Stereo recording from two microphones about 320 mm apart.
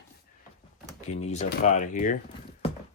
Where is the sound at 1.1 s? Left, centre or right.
Left.